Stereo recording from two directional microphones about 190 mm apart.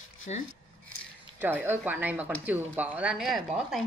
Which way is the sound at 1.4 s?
10° right (ahead or behind).